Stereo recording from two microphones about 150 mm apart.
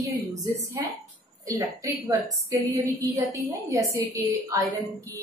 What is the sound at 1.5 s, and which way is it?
A woman's voice, 25° right (ahead or behind).